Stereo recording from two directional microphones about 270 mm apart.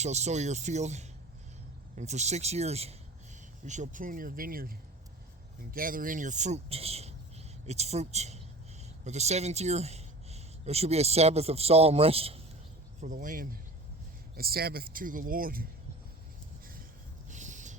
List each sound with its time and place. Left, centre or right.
0.0 s speech: right
5.7 s speech: right
17.2 s a sound: right